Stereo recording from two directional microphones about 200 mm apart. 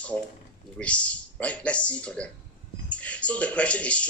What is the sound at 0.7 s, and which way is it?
Speech, 5° left (ahead or behind).